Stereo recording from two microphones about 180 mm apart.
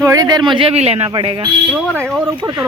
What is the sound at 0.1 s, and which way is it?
A woman's voice, 20° right (ahead or behind).